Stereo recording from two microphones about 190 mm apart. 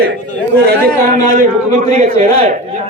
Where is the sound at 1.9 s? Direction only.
35° right (ahead or behind).